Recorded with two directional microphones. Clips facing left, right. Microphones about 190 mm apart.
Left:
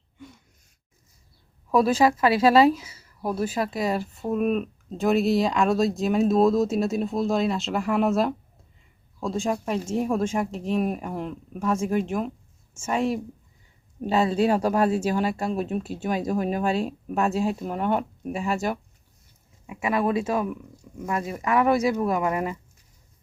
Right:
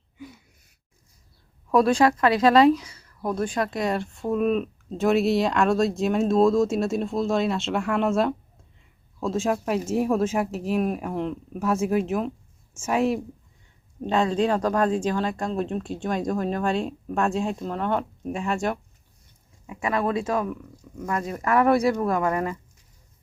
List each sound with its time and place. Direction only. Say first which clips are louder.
0.2 s gasp: right 4 dB; 5° right (ahead or behind)
1.7 s speech: right 1 dB; 5° left (ahead or behind)
14.0 s speech: left 1 dB; 5° left (ahead or behind)
19.6 s speech: left 1 dB; 15° left (ahead or behind)
22.1 s speech: right 1 dB; 15° left (ahead or behind)